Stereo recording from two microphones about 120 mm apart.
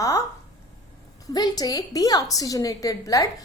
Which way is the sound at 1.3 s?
35° left (ahead or behind).